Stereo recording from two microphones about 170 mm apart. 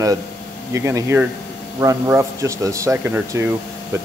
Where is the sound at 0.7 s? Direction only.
15° right (ahead or behind).